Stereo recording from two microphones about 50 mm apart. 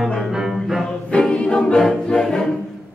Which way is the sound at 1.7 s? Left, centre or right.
Centre.